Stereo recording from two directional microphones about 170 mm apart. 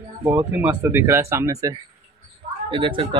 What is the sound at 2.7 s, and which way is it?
Speech, 30° right (ahead or behind).